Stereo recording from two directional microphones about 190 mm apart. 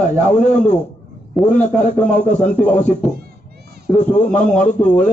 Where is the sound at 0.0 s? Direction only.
40° left (ahead or behind).